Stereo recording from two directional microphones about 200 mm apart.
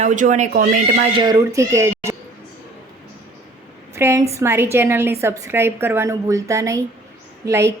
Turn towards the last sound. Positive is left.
turn(degrees=-15)  # may be behind; listen again after turning